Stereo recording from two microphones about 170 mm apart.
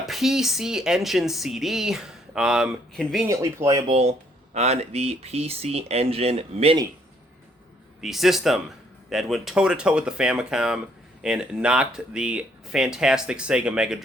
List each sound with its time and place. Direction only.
0.0 s speech: centre (ahead or behind)
3.2 s speech: 20° right (ahead or behind)
4.5 s speech: 40° right (ahead or behind)
8.0 s speech: centre (ahead or behind)